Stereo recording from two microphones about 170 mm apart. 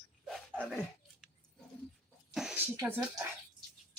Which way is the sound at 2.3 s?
5° right (ahead or behind).